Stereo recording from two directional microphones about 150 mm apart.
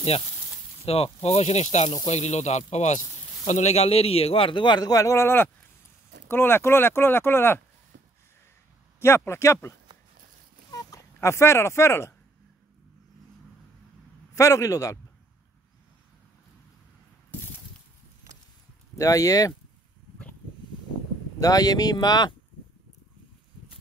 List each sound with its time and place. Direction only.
0.8 s a man's voice: 40° left (ahead or behind); by 7.6 s 15° left (ahead or behind)
9.0 s speech: 15° left (ahead or behind)
10.7 s a sound: 20° left (ahead or behind)
14.3 s speech: 20° left (ahead or behind)
18.9 s speech: 20° left (ahead or behind)
21.4 s speech: 25° left (ahead or behind)